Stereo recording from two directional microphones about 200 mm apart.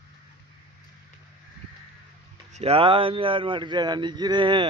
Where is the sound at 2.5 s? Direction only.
30° right (ahead or behind).